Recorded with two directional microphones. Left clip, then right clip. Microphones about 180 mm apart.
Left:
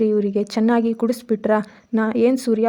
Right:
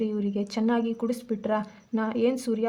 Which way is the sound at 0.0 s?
40° left (ahead or behind).